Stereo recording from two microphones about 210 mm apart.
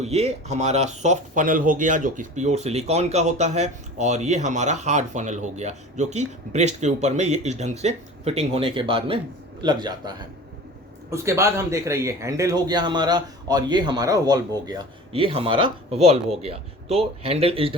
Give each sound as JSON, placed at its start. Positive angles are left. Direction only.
{"t": 0.0, "sound": "speech", "side_deg": -30}